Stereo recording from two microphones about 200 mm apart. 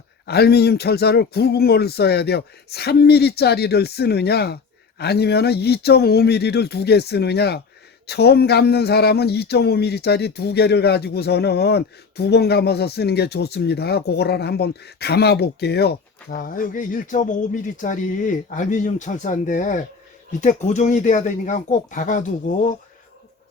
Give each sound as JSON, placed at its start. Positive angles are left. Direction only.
{"t": 0.3, "sound": "speech", "side_deg": 55}